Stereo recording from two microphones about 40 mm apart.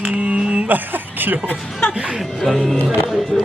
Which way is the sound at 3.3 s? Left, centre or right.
Centre.